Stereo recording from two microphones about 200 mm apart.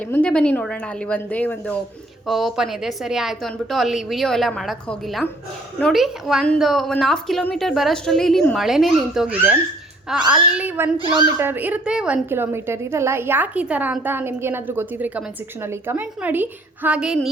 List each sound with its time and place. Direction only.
0.0 s a woman's voice: 5° left (ahead or behind)
10.9 s speech: 25° right (ahead or behind)
11.3 s a woman's voice: 10° right (ahead or behind)